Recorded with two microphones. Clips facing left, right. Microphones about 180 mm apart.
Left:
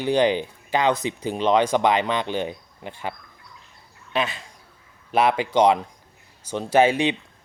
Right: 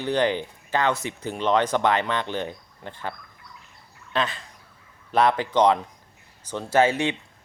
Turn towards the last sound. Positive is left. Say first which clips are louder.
# left 2 dB
turn(degrees=15)  # may be behind; listen again after turning